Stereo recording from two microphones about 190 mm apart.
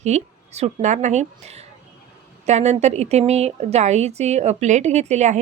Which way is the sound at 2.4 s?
35° right (ahead or behind).